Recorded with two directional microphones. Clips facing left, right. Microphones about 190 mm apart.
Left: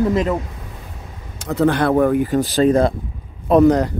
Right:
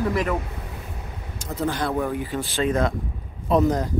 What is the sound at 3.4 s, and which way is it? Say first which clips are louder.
Speech: left 8 dB; 65° left (ahead or behind).